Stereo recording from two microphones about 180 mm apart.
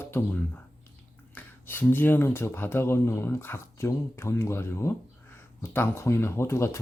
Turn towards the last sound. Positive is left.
turn(degrees=15)  # may be behind; listen again after turning